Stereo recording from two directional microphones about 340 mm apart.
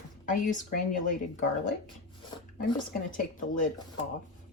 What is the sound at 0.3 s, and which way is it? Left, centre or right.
A woman's voice, left.